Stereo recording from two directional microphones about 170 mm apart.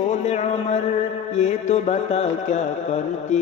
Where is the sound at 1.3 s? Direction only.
40° left (ahead or behind).